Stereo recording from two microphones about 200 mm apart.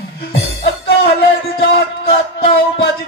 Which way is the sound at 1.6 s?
50° left (ahead or behind).